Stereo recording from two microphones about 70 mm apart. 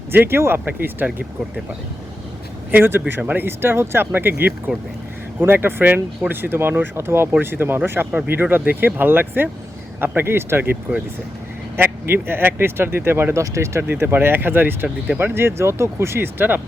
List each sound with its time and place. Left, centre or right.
0.1 s speech: right
2.7 s speech: right
3.2 s speech: right
3.4 s speech: right
11.8 s speech: right
13.3 s speech: right
13.8 s speech: right